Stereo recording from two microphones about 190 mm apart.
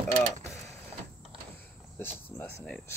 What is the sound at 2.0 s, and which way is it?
Speech, 10° left (ahead or behind).